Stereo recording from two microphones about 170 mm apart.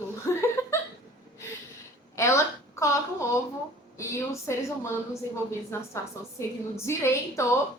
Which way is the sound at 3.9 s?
15° left (ahead or behind).